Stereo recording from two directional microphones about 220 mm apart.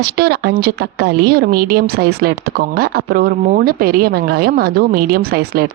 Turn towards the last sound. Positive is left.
turn(degrees=-45)  # may be behind; listen again after turning